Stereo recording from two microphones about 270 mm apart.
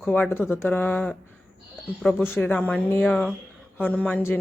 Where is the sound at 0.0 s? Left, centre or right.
Centre.